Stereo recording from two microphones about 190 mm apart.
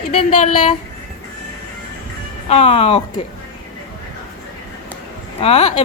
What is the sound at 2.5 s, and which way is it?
Speech, 30° left (ahead or behind).